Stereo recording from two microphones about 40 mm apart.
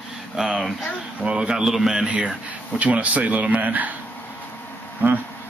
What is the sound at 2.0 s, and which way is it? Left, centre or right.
Speech, right.